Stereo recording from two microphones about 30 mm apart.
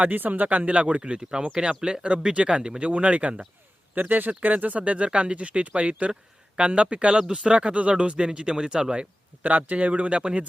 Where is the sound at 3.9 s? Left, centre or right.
Right.